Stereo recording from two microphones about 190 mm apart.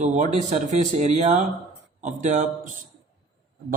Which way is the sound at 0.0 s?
40° right (ahead or behind).